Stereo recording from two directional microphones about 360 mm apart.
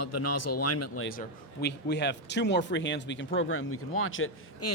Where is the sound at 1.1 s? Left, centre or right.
Left.